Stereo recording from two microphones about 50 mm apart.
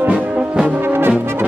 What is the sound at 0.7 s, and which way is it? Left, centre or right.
Brass instrument, right.